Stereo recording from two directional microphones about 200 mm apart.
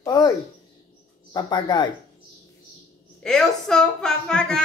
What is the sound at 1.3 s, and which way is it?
Speech, 20° left (ahead or behind).